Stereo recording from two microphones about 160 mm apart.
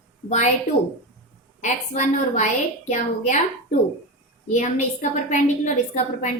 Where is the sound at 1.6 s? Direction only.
50° left (ahead or behind).